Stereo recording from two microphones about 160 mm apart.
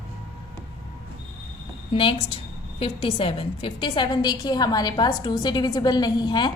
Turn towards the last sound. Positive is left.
turn(degrees=30)  # may be behind; listen again after turning